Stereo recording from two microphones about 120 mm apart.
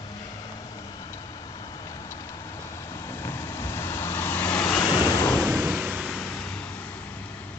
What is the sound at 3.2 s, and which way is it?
Waves, 20° left (ahead or behind).